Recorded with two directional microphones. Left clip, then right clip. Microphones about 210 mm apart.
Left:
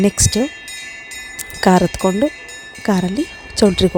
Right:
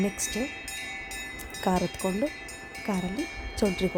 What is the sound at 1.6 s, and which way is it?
Speech, 45° left (ahead or behind).